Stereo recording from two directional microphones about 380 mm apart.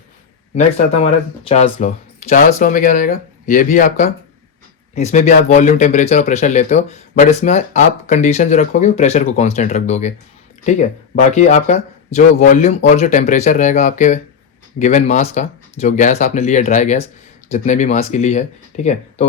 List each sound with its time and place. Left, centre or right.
1.5 s speech: centre